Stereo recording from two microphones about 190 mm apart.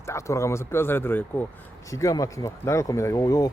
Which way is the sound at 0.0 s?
15° left (ahead or behind).